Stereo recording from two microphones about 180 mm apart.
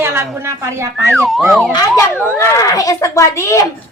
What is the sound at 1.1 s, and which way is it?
Speech, centre (ahead or behind).